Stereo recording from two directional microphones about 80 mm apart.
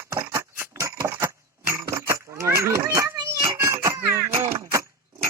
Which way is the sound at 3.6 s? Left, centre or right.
Right.